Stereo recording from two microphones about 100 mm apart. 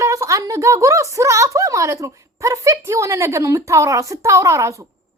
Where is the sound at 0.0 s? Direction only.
30° right (ahead or behind).